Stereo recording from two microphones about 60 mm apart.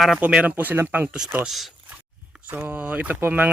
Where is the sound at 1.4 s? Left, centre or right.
Centre.